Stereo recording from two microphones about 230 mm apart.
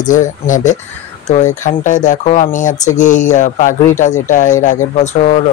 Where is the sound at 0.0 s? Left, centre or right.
Left.